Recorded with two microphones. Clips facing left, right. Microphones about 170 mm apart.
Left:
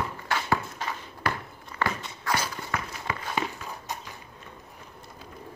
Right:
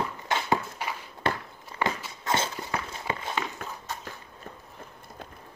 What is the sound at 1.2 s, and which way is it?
Walk, 25° right (ahead or behind).